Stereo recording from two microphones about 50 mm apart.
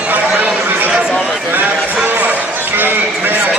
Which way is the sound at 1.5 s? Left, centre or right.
Right.